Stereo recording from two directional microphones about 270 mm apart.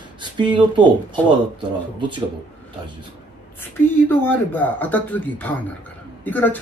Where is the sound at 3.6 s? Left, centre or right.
Centre.